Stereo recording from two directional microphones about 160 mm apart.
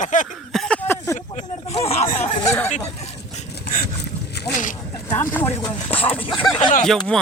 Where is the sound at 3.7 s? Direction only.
75° left (ahead or behind).